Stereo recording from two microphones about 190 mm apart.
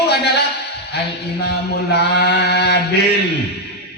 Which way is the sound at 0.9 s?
60° left (ahead or behind).